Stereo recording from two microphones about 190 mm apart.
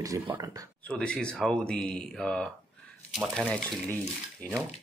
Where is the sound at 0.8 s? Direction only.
5° left (ahead or behind).